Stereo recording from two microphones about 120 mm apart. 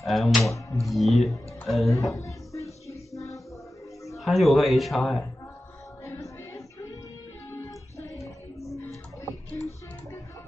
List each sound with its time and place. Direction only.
0.0 s speech: centre (ahead or behind)
2.1 s music: 25° left (ahead or behind)
4.2 s speech: centre (ahead or behind)
6.0 s music: 25° left (ahead or behind)